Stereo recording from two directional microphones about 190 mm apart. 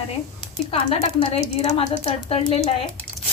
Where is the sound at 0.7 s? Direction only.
30° left (ahead or behind).